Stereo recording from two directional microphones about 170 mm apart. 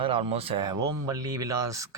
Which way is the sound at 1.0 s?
20° right (ahead or behind).